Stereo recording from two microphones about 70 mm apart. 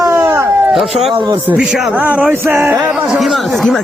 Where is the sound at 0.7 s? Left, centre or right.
Centre.